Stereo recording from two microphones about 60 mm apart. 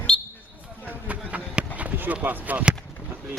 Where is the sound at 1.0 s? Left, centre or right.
Right.